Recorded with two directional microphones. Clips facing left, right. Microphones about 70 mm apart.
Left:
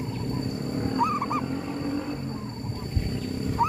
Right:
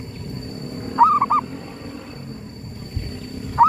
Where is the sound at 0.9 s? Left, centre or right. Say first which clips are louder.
Right 12 dB; right.